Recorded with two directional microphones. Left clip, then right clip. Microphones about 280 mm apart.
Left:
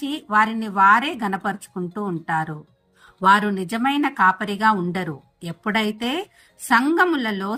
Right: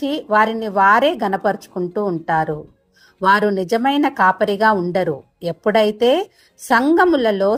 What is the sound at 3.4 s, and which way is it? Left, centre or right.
Speech, left.